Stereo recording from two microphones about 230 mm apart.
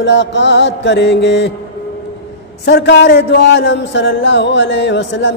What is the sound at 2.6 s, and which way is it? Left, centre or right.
A man's voice, left.